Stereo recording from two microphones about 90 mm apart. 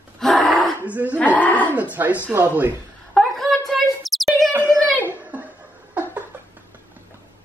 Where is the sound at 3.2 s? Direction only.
Centre (ahead or behind).